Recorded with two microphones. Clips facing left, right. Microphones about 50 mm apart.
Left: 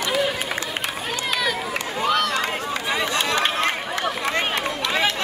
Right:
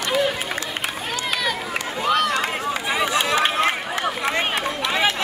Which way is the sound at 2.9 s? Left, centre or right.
Centre.